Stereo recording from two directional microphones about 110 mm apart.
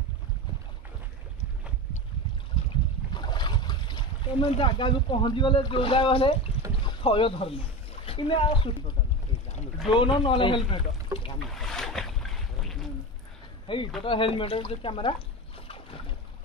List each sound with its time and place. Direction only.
3.2 s a sound: 45° left (ahead or behind)
4.5 s speech: 50° left (ahead or behind)
6.6 s boat: 55° left (ahead or behind)
7.0 s speech: 55° left (ahead or behind)
9.9 s speech: 50° left (ahead or behind)
11.4 s boat: centre (ahead or behind)
13.7 s speech: 50° left (ahead or behind)